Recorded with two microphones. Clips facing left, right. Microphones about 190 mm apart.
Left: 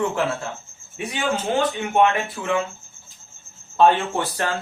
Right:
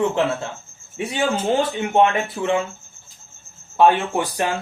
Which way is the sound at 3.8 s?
15° right (ahead or behind).